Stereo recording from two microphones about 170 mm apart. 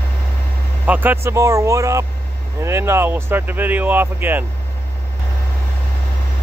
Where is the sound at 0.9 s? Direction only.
10° right (ahead or behind).